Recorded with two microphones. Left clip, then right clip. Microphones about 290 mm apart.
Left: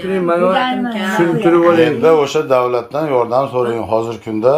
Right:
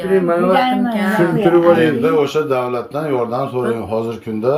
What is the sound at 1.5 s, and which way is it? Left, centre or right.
Speech, centre.